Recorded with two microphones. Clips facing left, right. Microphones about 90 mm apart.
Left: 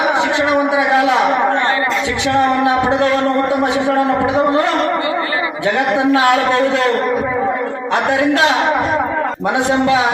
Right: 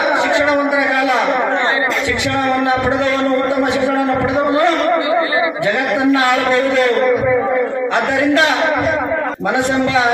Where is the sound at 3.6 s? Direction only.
30° left (ahead or behind).